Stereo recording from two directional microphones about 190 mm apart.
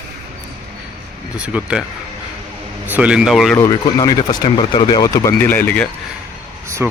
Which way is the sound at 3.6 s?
20° left (ahead or behind).